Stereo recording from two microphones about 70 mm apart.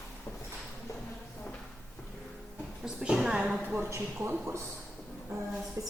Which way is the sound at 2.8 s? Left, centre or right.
Centre.